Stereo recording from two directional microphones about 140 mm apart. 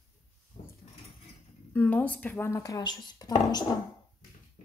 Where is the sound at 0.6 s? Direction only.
60° left (ahead or behind).